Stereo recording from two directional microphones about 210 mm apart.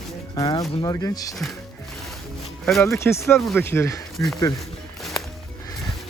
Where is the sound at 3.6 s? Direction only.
10° left (ahead or behind).